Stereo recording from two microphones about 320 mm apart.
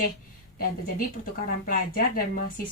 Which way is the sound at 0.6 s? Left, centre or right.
Left.